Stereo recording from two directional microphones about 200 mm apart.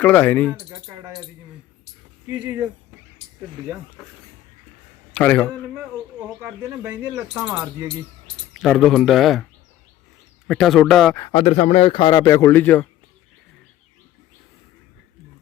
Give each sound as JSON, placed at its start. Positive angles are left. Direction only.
{"t": 0.0, "sound": "speech", "side_deg": 10}
{"t": 2.2, "sound": "speech", "side_deg": -10}
{"t": 5.1, "sound": "speech", "side_deg": 5}
{"t": 5.7, "sound": "speech", "side_deg": -10}
{"t": 8.5, "sound": "speech", "side_deg": 0}
{"t": 10.5, "sound": "speech", "side_deg": 0}
{"t": 11.3, "sound": "speech", "side_deg": 30}